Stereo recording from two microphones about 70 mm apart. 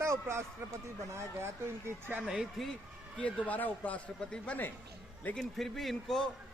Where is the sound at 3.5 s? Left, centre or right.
Left.